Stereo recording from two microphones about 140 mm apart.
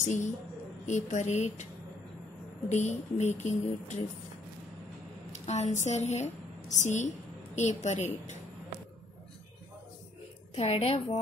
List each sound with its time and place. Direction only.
0.0 s a woman's voice: 60° left (ahead or behind)
2.7 s speech: 55° left (ahead or behind)
5.3 s a woman's voice: 55° left (ahead or behind)
10.5 s a woman's voice: 45° left (ahead or behind)